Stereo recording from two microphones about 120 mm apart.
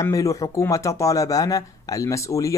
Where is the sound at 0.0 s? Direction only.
30° left (ahead or behind).